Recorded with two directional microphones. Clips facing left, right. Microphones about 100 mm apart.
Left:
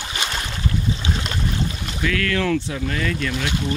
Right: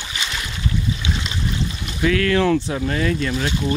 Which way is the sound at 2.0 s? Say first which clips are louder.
Right 5 dB; 20° right (ahead or behind).